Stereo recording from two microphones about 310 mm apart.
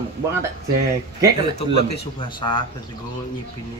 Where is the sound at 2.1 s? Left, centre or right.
Centre.